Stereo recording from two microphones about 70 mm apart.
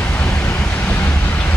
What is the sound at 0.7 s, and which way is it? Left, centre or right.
Vehicle, left.